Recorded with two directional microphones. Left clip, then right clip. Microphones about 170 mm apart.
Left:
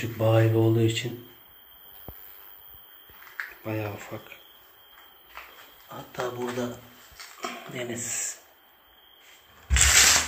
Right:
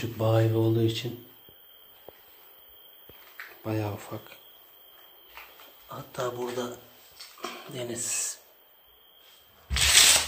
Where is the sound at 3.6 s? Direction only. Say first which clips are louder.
Right 3 dB; 20° right (ahead or behind).